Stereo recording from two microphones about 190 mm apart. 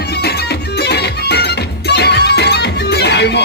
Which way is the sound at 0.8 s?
60° left (ahead or behind).